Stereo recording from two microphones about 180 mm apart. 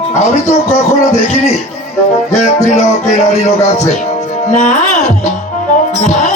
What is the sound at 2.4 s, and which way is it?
Music, 40° left (ahead or behind).